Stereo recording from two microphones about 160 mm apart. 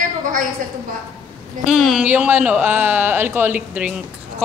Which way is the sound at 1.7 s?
Centre (ahead or behind).